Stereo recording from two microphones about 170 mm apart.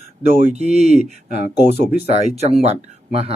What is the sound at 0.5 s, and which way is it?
Speech, 40° right (ahead or behind).